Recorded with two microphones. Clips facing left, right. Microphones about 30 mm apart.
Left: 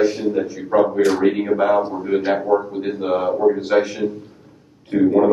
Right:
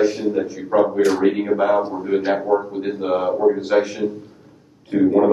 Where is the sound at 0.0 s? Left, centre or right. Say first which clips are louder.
Even; centre.